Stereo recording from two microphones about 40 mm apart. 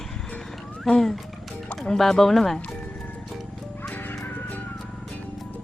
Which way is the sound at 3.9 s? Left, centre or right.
Left.